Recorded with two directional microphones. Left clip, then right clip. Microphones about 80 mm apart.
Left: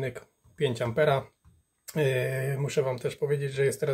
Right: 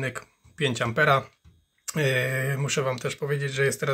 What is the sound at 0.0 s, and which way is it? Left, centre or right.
Speech, left.